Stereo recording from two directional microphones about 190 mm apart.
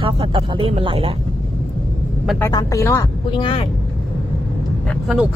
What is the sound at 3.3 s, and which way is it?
Speech, 25° left (ahead or behind).